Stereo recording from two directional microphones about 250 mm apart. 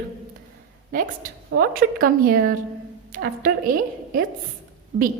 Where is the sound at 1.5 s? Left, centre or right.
Right.